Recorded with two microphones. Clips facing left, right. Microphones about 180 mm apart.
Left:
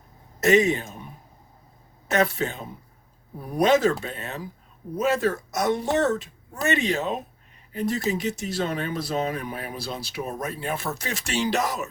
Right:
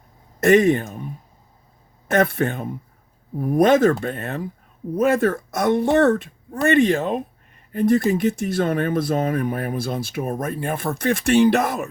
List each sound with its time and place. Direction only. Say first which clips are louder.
0.3 s speech: right 5 dB; 55° right (ahead or behind)
2.0 s speech: right 4 dB; 55° right (ahead or behind)